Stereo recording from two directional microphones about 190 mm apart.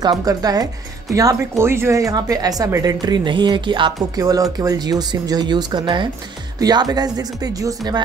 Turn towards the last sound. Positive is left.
turn(degrees=-20)  # may be behind; listen again after turning